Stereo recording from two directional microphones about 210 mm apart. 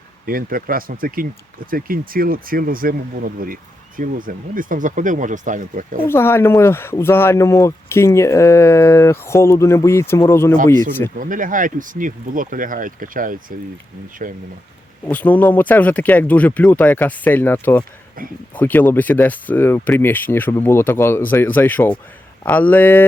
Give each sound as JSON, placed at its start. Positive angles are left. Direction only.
{"t": 0.3, "sound": "speech", "side_deg": -45}
{"t": 6.1, "sound": "speech", "side_deg": 10}
{"t": 11.2, "sound": "speech", "side_deg": -40}
{"t": 15.0, "sound": "speech", "side_deg": 10}
{"t": 18.2, "sound": "speech", "side_deg": -40}
{"t": 18.5, "sound": "speech", "side_deg": 10}